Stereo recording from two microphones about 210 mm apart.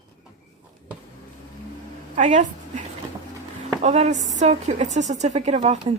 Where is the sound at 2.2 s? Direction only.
35° right (ahead or behind).